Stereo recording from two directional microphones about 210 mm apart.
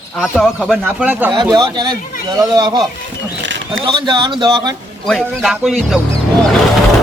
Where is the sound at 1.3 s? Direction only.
20° right (ahead or behind).